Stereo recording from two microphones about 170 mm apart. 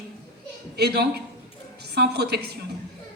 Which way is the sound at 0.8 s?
75° right (ahead or behind).